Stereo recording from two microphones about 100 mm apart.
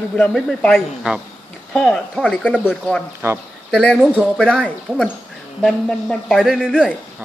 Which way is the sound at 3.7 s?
5° left (ahead or behind).